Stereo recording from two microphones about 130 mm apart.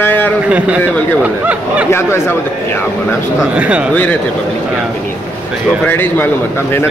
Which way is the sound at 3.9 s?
10° left (ahead or behind).